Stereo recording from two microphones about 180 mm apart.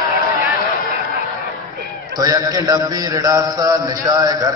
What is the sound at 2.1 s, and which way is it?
A man's voice, 20° right (ahead or behind).